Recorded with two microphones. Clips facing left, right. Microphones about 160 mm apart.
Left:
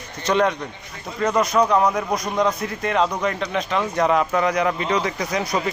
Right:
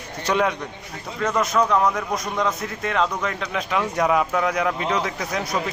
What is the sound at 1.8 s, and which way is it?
Speech, 15° left (ahead or behind).